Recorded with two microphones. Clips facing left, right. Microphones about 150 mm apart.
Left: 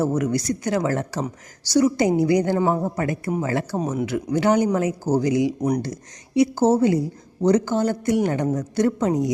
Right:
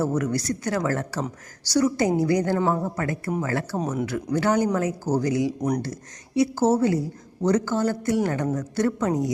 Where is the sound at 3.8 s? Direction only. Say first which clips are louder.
Left 2 dB; 5° left (ahead or behind).